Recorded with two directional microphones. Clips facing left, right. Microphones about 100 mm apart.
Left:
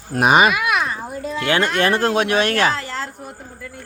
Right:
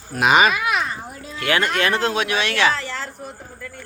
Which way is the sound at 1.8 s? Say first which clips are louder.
Left 3 dB; 40° left (ahead or behind).